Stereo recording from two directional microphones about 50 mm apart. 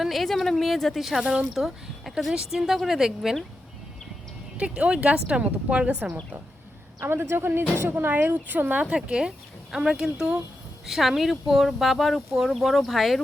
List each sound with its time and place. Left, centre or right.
0.0 s speech: centre
1.2 s speech: centre
1.5 s a woman's voice: centre
4.5 s speech: right
7.0 s a woman's voice: right
9.0 s a woman's voice: centre